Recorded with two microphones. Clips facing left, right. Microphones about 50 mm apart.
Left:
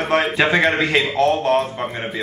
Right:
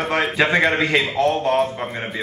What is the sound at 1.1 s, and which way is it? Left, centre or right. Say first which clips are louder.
Speech: left 2 dB; left.